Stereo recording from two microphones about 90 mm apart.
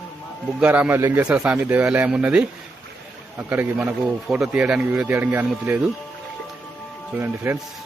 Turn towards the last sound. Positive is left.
turn(degrees=-25)  # may be behind; listen again after turning